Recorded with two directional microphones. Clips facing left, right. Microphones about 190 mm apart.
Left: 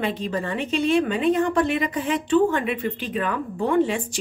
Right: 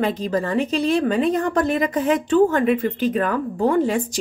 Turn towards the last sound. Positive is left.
turn(degrees=-40)  # may be behind; listen again after turning